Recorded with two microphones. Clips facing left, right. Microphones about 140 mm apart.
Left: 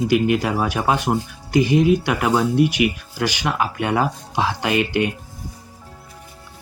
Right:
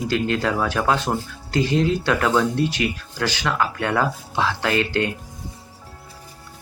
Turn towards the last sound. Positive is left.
turn(degrees=15)  # may be behind; listen again after turning